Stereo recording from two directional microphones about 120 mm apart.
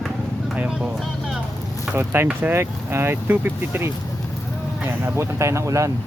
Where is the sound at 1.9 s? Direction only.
20° right (ahead or behind).